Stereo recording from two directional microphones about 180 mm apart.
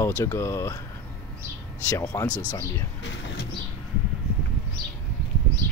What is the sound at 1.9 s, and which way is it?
Speech, 15° left (ahead or behind).